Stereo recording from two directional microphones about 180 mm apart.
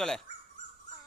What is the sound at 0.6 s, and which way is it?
Dog, 45° left (ahead or behind).